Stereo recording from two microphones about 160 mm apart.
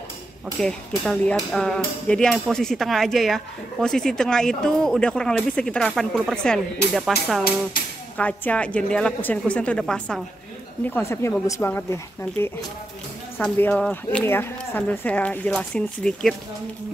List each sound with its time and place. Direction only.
0.6 s speech: 5° left (ahead or behind)
8.2 s speech: 10° left (ahead or behind)
10.9 s speech: 15° left (ahead or behind)